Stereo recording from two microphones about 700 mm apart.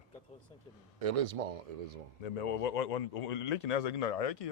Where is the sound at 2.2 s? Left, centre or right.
Left.